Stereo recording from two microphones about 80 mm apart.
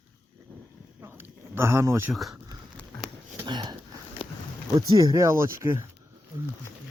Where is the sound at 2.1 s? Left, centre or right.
Centre.